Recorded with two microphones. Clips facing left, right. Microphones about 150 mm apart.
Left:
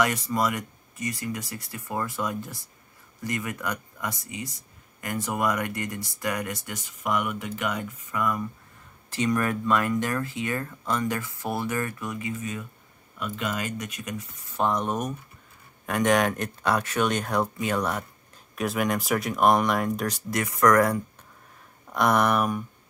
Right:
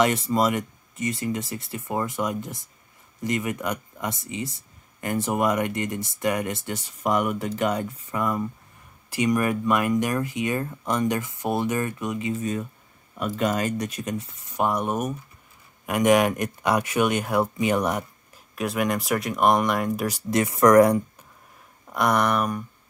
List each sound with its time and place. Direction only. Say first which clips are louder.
0.0 s speech: right 4 dB; 25° right (ahead or behind)
9.1 s speech: right 3 dB; 15° right (ahead or behind); by 14.2 s 35° right (ahead or behind)
14.5 s speech: right 1 dB; 10° right (ahead or behind)
18.5 s speech: right 1 dB; centre (ahead or behind)
20.2 s speech: right 4 dB; 25° right (ahead or behind)
21.9 s speech: even; centre (ahead or behind)